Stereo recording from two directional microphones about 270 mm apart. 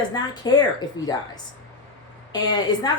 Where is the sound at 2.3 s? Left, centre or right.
Centre.